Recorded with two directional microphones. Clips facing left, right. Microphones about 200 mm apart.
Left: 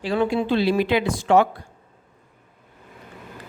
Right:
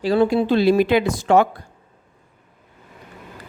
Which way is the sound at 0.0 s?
40° right (ahead or behind).